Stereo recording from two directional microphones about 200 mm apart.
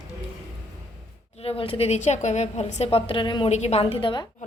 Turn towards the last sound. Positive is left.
turn(degrees=25)  # may be behind; listen again after turning